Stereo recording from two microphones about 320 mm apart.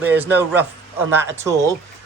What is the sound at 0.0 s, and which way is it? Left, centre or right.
Speech, centre.